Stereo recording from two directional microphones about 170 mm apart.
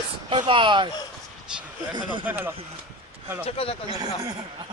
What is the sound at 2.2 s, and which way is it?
Speech, 15° right (ahead or behind).